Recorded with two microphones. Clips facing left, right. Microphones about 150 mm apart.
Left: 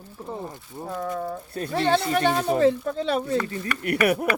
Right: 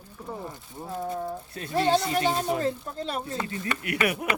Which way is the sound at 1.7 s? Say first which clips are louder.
Left 1 dB; 65° left (ahead or behind).